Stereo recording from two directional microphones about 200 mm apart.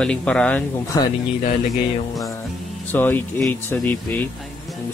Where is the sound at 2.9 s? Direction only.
10° left (ahead or behind).